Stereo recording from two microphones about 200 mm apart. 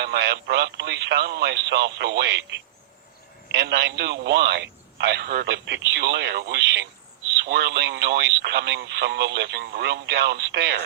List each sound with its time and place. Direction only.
0.0 s speech: 55° right (ahead or behind)